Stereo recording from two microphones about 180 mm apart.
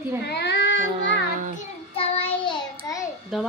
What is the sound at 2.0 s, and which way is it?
Child singing, 30° left (ahead or behind).